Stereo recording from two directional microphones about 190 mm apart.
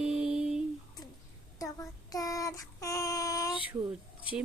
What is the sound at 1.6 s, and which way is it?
Child singing, 20° left (ahead or behind).